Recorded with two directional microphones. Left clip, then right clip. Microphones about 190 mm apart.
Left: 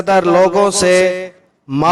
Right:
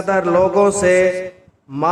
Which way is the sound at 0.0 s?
55° left (ahead or behind).